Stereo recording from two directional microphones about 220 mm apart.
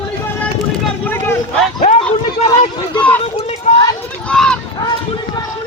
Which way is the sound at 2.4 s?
30° left (ahead or behind).